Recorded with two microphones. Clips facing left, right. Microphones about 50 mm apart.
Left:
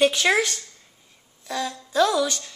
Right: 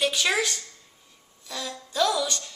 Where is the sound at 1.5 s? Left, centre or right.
Centre.